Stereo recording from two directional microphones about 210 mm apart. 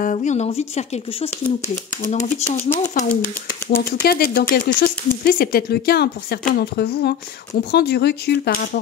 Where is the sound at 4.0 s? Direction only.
45° left (ahead or behind).